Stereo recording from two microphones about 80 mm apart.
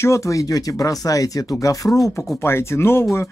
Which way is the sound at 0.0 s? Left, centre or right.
Left.